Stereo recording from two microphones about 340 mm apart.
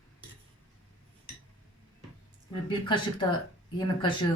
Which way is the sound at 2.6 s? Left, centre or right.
Centre.